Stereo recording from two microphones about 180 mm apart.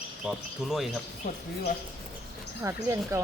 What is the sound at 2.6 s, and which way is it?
Speech, 15° right (ahead or behind).